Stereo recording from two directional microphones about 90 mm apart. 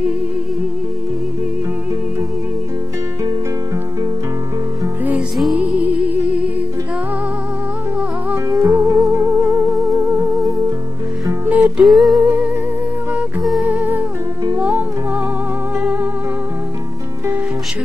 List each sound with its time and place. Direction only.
5.6 s music: 15° right (ahead or behind)
8.5 s music: 30° right (ahead or behind)
11.4 s music: 20° right (ahead or behind)
11.8 s humming: centre (ahead or behind)
12.2 s music: 20° right (ahead or behind)
13.4 s music: centre (ahead or behind)
13.7 s music: 15° right (ahead or behind)
15.8 s music: 20° right (ahead or behind)